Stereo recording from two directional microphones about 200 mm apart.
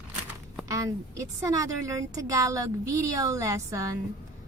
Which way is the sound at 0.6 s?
15° right (ahead or behind).